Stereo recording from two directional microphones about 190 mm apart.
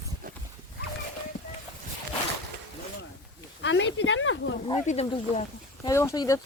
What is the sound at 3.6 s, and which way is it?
Speech, 70° left (ahead or behind).